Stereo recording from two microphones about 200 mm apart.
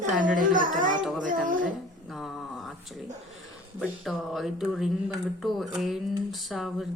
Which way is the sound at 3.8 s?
Centre (ahead or behind).